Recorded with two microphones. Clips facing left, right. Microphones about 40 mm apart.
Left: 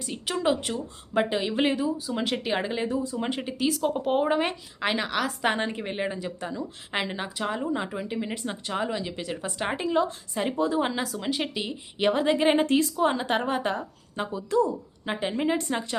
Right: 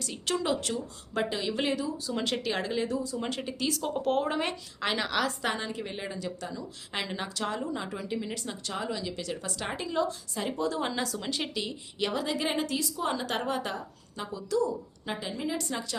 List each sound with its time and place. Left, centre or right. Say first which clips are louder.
0.0 s speech: left 4 dB; centre
2.0 s a woman's voice: left 3 dB; centre
5.4 s speech: left 5 dB; left
13.0 s a woman's voice: left 6 dB; left